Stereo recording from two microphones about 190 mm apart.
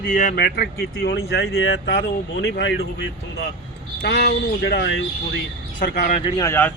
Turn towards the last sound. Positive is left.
turn(degrees=10)  # may be behind; listen again after turning